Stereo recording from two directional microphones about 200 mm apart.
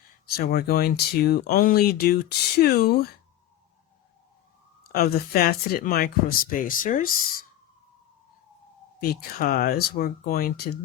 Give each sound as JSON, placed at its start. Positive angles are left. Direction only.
{"t": 0.3, "sound": "speech", "side_deg": 50}
{"t": 4.9, "sound": "speech", "side_deg": 50}
{"t": 9.0, "sound": "speech", "side_deg": 50}